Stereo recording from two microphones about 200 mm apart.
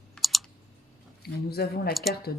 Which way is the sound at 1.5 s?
50° left (ahead or behind).